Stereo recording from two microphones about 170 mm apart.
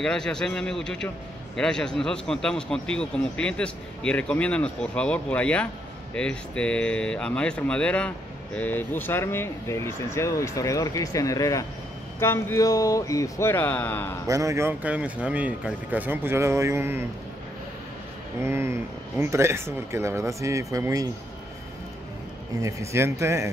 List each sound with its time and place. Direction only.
0.0 s a man's voice: 5° left (ahead or behind)
14.2 s speech: 20° right (ahead or behind)
18.4 s speech: 15° right (ahead or behind)
22.6 s speech: 20° right (ahead or behind)